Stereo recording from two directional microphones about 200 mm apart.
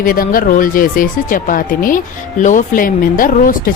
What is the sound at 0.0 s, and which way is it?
Speech, 45° left (ahead or behind).